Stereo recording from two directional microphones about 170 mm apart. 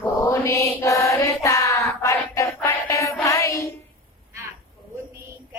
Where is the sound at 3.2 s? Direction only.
20° left (ahead or behind).